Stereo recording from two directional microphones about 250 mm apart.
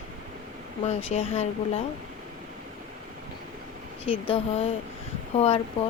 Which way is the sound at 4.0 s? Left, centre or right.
Left.